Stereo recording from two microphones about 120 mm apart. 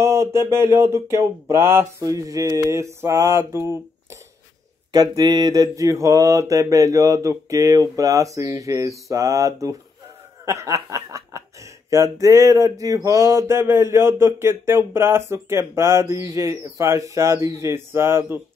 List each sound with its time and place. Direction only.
0.0 s speech: 20° right (ahead or behind)
4.9 s speech: 35° right (ahead or behind)